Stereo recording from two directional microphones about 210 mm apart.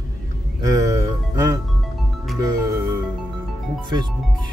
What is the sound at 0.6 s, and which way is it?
Music, 15° right (ahead or behind).